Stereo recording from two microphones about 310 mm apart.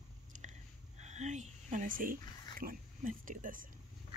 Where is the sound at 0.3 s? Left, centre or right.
Right.